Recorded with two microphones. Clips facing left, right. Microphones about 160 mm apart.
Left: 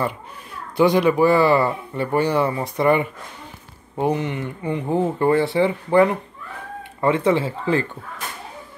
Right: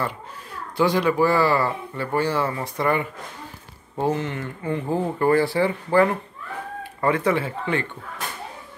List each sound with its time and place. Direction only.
0.7 s speech: 15° left (ahead or behind)